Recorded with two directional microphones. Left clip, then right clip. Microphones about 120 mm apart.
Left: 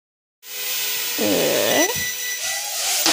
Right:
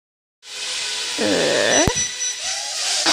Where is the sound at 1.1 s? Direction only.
10° left (ahead or behind).